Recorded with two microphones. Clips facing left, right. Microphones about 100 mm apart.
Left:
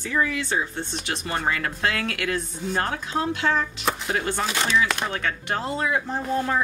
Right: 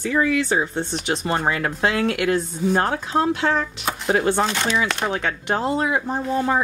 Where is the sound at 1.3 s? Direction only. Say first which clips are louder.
Right 2 dB; 35° right (ahead or behind).